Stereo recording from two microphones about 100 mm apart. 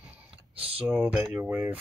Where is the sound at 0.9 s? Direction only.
10° right (ahead or behind).